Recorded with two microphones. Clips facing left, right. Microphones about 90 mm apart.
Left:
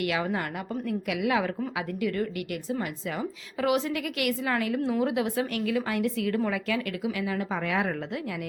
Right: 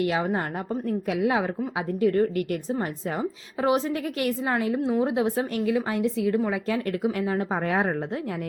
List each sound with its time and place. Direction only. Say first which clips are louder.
0.0 s a woman's voice: right 3 dB; 30° right (ahead or behind)
6.7 s speech: right 4 dB; 40° right (ahead or behind)